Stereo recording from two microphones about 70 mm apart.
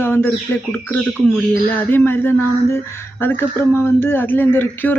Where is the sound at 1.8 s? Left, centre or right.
Left.